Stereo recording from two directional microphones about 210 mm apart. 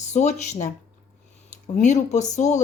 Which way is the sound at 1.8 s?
35° left (ahead or behind).